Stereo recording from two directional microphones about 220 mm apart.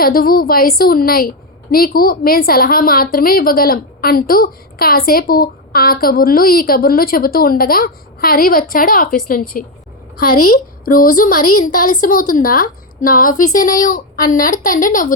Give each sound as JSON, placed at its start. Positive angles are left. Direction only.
{"t": 0.0, "sound": "a woman's voice", "side_deg": 40}
{"t": 10.2, "sound": "a woman's voice", "side_deg": 90}
{"t": 10.8, "sound": "speech", "side_deg": 40}
{"t": 11.4, "sound": "a woman's voice", "side_deg": 90}
{"t": 11.7, "sound": "speech", "side_deg": 40}